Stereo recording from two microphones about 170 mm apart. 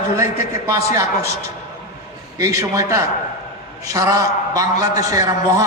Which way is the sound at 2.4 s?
20° right (ahead or behind).